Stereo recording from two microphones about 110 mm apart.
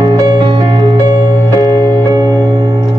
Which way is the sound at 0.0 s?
40° right (ahead or behind).